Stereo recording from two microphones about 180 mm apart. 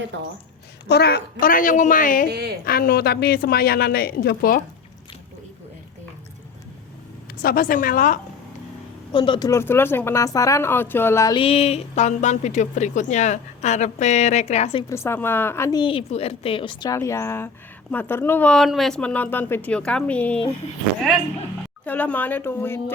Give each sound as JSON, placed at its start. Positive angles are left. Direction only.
{"t": 0.1, "sound": "a woman's voice", "side_deg": -80}
{"t": 0.9, "sound": "a woman's voice", "side_deg": 65}
{"t": 2.3, "sound": "a woman's voice", "side_deg": -60}
{"t": 2.6, "sound": "a woman's voice", "side_deg": 55}
{"t": 7.4, "sound": "a woman's voice", "side_deg": 50}
{"t": 9.1, "sound": "speech", "side_deg": 25}
{"t": 9.5, "sound": "speech", "side_deg": 15}
{"t": 11.3, "sound": "a woman's voice", "side_deg": 30}
{"t": 14.8, "sound": "speech", "side_deg": 15}
{"t": 15.8, "sound": "speech", "side_deg": 30}
{"t": 21.8, "sound": "speech", "side_deg": 10}